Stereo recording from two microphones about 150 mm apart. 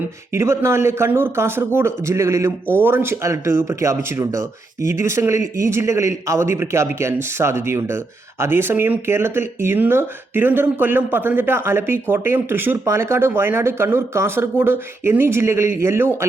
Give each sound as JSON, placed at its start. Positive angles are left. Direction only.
{"t": 0.3, "sound": "a man's voice", "side_deg": -15}